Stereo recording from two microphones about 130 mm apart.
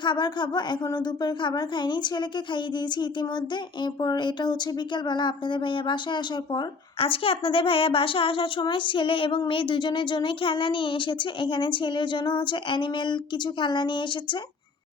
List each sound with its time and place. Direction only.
0.0 s speech: 35° left (ahead or behind)